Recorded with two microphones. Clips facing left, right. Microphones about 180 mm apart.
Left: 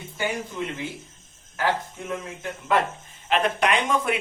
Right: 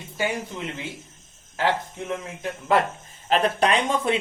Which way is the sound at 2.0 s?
25° right (ahead or behind).